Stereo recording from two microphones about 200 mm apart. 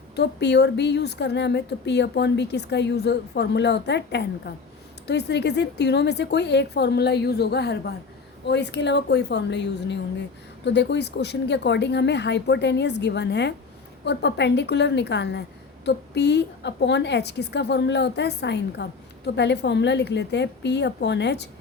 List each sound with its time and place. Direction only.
0.2 s a woman's voice: 55° left (ahead or behind)